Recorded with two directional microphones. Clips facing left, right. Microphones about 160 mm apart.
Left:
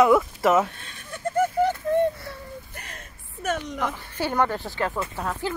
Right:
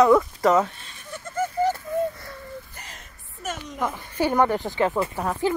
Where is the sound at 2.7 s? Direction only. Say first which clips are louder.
Left 2 dB; 60° left (ahead or behind).